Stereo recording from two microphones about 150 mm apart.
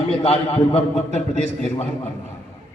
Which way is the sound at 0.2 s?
45° left (ahead or behind).